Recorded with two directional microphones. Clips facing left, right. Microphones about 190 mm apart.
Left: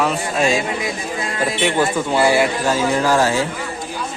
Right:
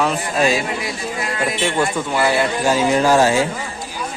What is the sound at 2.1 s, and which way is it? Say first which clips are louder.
Speech: left 4 dB; 20° left (ahead or behind).